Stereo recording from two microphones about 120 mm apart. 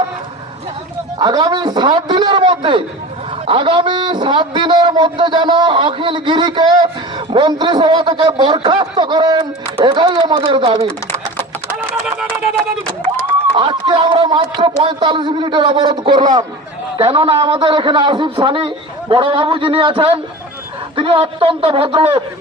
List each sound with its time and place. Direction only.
1.2 s a man's voice: 30° right (ahead or behind)
10.4 s a man's voice: 50° right (ahead or behind)
13.5 s a man's voice: 40° right (ahead or behind)
17.0 s a man's voice: 50° right (ahead or behind)